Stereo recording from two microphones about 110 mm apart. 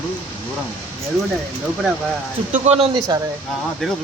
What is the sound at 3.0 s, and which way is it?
Speech, 35° right (ahead or behind).